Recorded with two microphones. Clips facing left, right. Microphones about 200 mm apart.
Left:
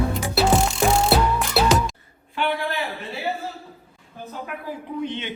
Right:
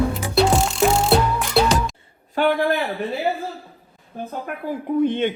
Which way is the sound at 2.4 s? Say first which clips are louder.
Right 6 dB; 50° right (ahead or behind).